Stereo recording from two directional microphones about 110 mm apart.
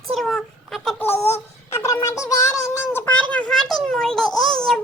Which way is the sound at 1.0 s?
20° left (ahead or behind).